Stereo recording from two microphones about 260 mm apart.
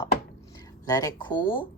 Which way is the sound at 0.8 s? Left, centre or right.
Centre.